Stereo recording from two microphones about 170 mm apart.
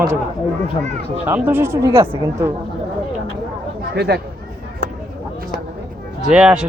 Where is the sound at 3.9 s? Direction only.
75° right (ahead or behind).